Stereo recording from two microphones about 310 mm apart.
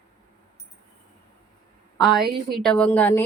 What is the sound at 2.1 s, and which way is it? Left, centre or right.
A woman's voice, centre.